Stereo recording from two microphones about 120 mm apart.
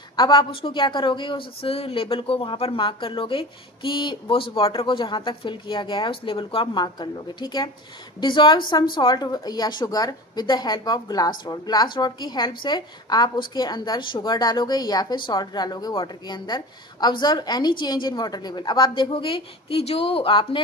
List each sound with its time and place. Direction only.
0.1 s a woman's voice: 35° left (ahead or behind)
0.5 s speech: 50° left (ahead or behind)